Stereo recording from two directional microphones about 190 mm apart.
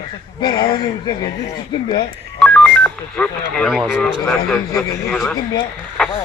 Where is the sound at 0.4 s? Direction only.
20° left (ahead or behind).